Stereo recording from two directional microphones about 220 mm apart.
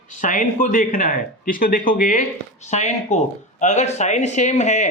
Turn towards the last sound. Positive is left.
turn(degrees=30)  # may be behind; listen again after turning